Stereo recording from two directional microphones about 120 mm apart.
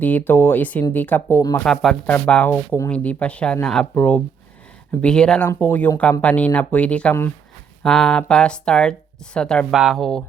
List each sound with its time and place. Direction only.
0.0 s speech: 15° left (ahead or behind)
1.6 s speech: 5° left (ahead or behind)